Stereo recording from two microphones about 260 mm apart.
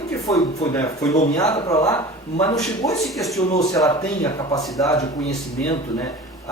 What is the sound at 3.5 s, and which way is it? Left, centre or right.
Speech, centre.